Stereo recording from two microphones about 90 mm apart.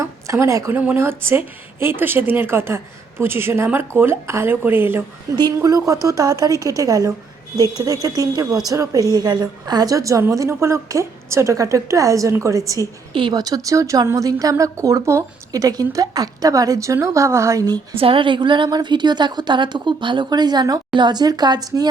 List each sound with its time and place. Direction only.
0.0 s a sound: 35° right (ahead or behind)
0.8 s a woman's voice: 20° right (ahead or behind)
5.3 s speech: 40° right (ahead or behind)
17.9 s a woman's voice: 90° right; by 21.8 s 50° right (ahead or behind)